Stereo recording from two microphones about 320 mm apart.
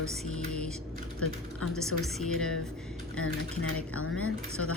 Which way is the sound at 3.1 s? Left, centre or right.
Left.